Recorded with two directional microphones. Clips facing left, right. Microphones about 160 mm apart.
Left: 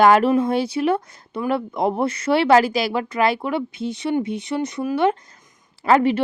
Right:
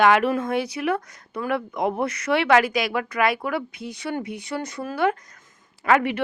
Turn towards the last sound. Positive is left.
turn(degrees=30)  # may be behind; listen again after turning